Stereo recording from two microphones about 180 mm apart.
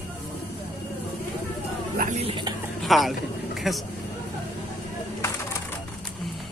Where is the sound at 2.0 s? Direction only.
40° right (ahead or behind).